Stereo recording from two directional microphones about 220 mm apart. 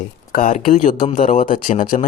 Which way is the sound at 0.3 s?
35° left (ahead or behind).